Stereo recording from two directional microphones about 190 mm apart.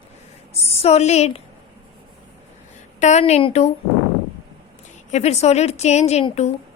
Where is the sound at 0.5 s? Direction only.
35° left (ahead or behind).